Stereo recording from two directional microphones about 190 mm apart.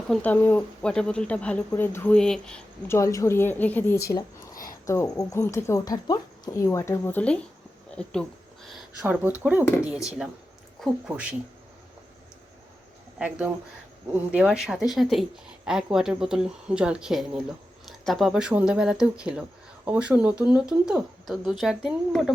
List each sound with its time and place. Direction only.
0.1 s speech: 10° left (ahead or behind)
8.7 s speech: 5° right (ahead or behind)
13.1 s speech: 5° right (ahead or behind)